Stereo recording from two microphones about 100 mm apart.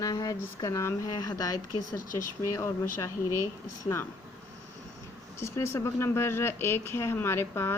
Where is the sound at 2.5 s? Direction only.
30° left (ahead or behind).